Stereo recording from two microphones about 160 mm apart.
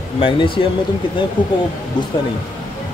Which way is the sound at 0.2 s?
35° left (ahead or behind).